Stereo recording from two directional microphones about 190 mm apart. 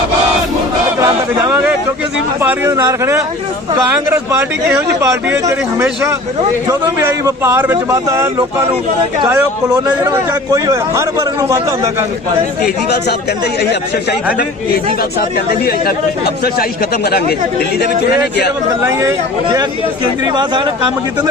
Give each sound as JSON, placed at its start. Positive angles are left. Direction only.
{"t": 1.0, "sound": "chatter", "side_deg": -15}
{"t": 2.4, "sound": "a man's voice", "side_deg": -15}
{"t": 12.6, "sound": "a man's voice", "side_deg": 60}
{"t": 15.4, "sound": "a man's voice", "side_deg": 55}
{"t": 18.8, "sound": "a man's voice", "side_deg": -15}